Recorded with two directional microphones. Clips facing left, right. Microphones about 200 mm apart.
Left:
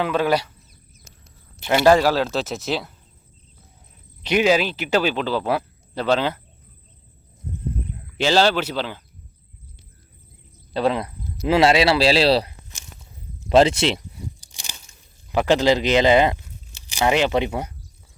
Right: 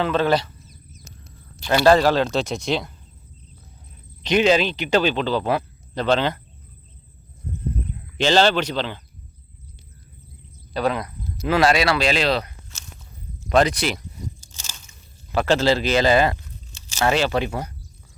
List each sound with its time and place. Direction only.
0.0 s speech: 10° left (ahead or behind)
1.6 s speech: 15° left (ahead or behind)
4.2 s speech: 10° left (ahead or behind)
8.2 s speech: 5° left (ahead or behind)
10.8 s speech: 25° left (ahead or behind)
14.4 s crunch: 15° left (ahead or behind)
15.3 s speech: 15° left (ahead or behind)